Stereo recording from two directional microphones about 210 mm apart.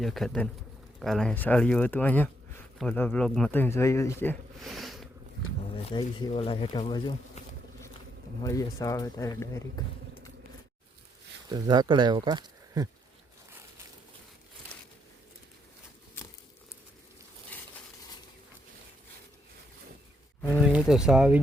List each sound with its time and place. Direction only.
0.0 s speech: centre (ahead or behind)
5.7 s speech: 20° left (ahead or behind)
11.4 s speech: 20° right (ahead or behind)
17.5 s a sound: 5° left (ahead or behind)
20.5 s speech: 5° right (ahead or behind)